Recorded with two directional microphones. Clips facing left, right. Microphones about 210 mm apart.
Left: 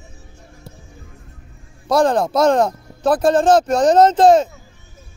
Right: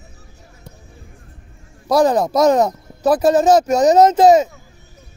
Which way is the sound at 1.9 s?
5° right (ahead or behind).